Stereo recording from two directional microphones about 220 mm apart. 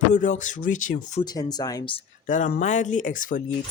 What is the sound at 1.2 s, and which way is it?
Speech, 15° left (ahead or behind).